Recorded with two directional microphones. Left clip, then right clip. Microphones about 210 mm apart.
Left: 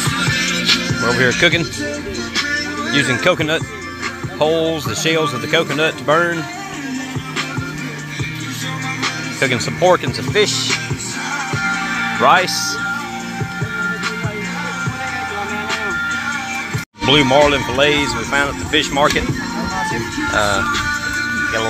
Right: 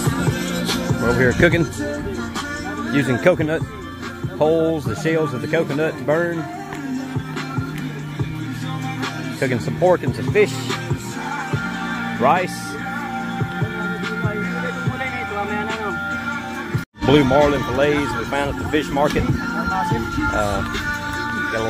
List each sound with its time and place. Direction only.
0.2 s music: 45° right (ahead or behind)
1.0 s speech: 15° right (ahead or behind)
2.9 s speech: 20° right (ahead or behind)
5.1 s speech: 5° right (ahead or behind)
9.4 s speech: centre (ahead or behind)
10.3 s speech: 20° right (ahead or behind)
11.5 s music: 15° right (ahead or behind)
12.2 s speech: 5° left (ahead or behind)
17.1 s speech: centre (ahead or behind)